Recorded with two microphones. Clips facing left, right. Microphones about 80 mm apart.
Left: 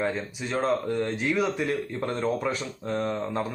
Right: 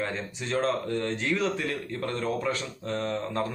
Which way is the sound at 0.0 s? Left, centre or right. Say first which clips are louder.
Left 3 dB; centre.